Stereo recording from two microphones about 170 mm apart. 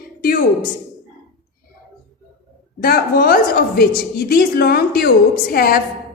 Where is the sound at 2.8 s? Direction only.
60° left (ahead or behind).